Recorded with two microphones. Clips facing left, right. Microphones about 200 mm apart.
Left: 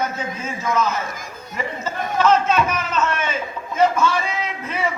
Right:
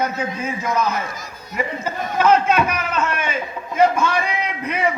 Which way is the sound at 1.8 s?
10° right (ahead or behind).